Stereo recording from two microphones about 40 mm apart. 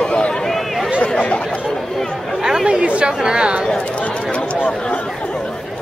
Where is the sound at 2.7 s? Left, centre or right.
Right.